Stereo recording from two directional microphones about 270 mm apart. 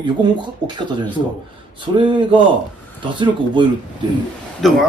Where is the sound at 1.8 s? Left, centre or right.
Centre.